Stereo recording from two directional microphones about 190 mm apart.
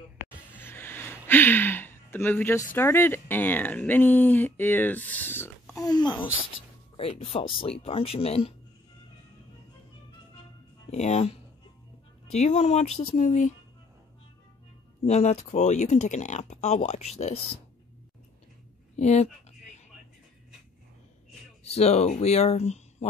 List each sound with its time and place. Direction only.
0.6 s music: 10° left (ahead or behind)
1.2 s speech: 10° left (ahead or behind); by 8.5 s 30° left (ahead or behind)
10.9 s speech: 35° left (ahead or behind)
15.0 s speech: 35° left (ahead or behind)
18.9 s speech: 35° left (ahead or behind)
21.6 s speech: 35° left (ahead or behind)